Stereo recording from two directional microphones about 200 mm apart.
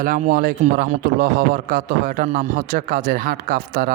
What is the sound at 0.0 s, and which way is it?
A man's voice, 45° right (ahead or behind).